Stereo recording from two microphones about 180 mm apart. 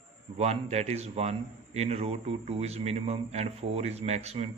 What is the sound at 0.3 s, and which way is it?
A man's voice, 35° right (ahead or behind).